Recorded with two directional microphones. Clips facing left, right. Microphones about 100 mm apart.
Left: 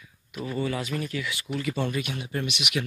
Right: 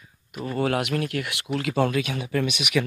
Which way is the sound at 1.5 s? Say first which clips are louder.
Right 6 dB; 90° right.